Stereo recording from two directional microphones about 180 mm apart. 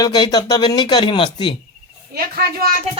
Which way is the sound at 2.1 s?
60° right (ahead or behind).